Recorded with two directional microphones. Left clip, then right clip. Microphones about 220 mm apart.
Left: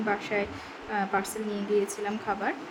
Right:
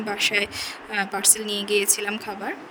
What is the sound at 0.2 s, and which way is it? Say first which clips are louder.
Speech: right 8 dB; 50° right (ahead or behind).